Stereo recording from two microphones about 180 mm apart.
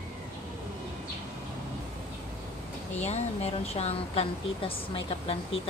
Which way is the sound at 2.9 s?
40° left (ahead or behind).